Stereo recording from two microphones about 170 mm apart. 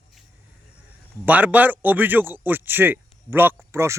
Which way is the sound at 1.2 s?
10° right (ahead or behind).